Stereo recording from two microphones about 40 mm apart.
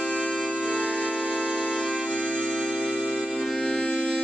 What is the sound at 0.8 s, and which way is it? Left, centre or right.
Music, centre.